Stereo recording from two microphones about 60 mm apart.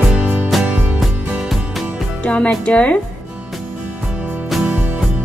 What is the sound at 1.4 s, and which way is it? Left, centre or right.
Music, centre.